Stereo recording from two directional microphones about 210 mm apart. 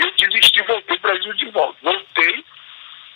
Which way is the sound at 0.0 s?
50° left (ahead or behind).